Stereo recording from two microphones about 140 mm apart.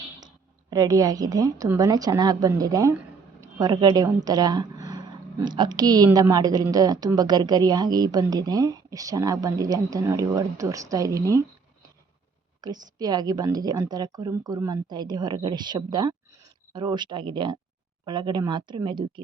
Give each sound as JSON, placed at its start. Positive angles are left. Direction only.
{"t": 0.7, "sound": "speech", "side_deg": -25}
{"t": 12.6, "sound": "speech", "side_deg": -30}